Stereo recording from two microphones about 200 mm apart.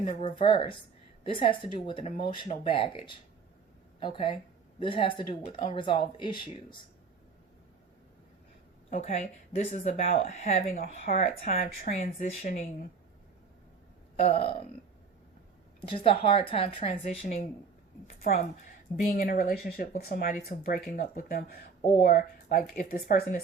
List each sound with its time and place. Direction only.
0.0 s speech: 35° left (ahead or behind)
8.9 s speech: 35° left (ahead or behind)
14.3 s speech: 30° left (ahead or behind)
15.9 s speech: 25° left (ahead or behind); by 23.4 s 50° left (ahead or behind)